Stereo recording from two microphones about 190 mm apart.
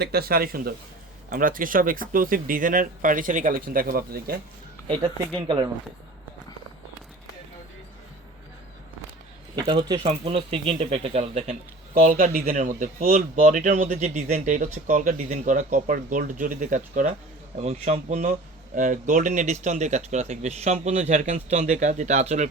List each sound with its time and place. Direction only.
0.0 s speech: 55° right (ahead or behind)
4.9 s speech: 25° right (ahead or behind)
9.6 s speech: 25° right (ahead or behind)
11.9 s speech: 45° right (ahead or behind)